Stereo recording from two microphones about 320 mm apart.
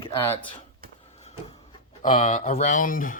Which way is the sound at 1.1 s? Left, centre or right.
Centre.